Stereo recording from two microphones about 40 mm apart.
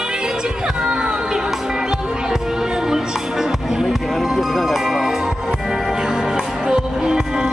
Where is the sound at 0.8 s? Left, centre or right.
Right.